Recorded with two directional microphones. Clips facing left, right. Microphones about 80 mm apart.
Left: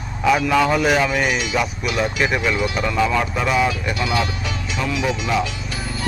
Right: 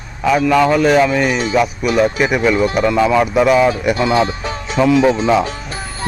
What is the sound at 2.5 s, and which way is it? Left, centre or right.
Speech, right.